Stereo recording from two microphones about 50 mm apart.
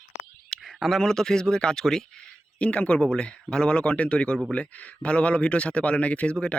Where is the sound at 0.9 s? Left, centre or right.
Centre.